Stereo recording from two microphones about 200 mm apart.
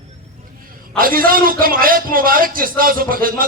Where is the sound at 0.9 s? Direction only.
45° right (ahead or behind).